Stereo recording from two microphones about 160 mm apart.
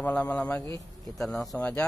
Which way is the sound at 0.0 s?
10° left (ahead or behind).